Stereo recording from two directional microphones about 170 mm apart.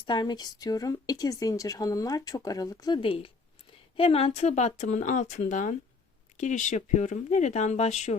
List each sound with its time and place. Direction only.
0.0 s a woman's voice: 25° left (ahead or behind); by 8.2 s 40° left (ahead or behind)